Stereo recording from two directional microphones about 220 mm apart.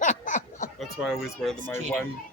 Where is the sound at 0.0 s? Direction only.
35° left (ahead or behind).